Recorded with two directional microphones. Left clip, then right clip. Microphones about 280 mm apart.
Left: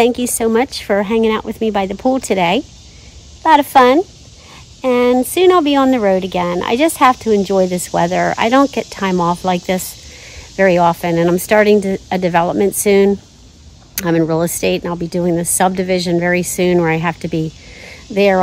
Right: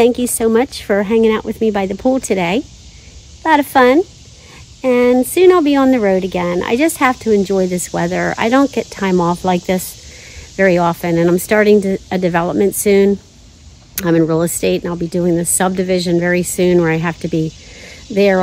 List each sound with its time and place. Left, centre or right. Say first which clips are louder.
0.0 s speech: right 1 dB; centre